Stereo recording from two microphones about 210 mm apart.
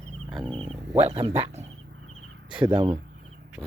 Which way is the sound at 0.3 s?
Centre (ahead or behind).